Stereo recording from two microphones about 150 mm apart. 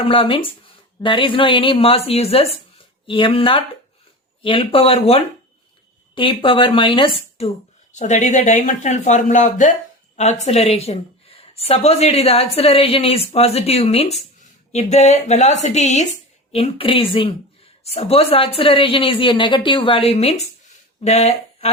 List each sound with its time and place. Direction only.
0.0 s speech: 35° left (ahead or behind)
7.9 s a woman's voice: 50° left (ahead or behind)